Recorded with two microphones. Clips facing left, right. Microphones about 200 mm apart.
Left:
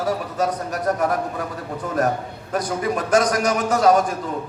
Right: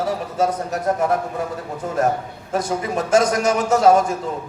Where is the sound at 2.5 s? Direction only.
25° right (ahead or behind).